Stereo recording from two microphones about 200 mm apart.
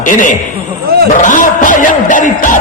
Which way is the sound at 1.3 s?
40° left (ahead or behind).